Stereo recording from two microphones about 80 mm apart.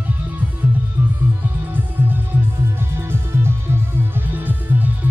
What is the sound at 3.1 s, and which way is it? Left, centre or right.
Music, right.